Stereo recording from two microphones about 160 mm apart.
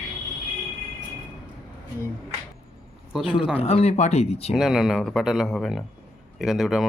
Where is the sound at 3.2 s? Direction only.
30° left (ahead or behind).